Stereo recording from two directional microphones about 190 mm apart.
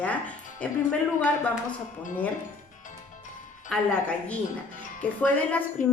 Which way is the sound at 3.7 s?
5° left (ahead or behind).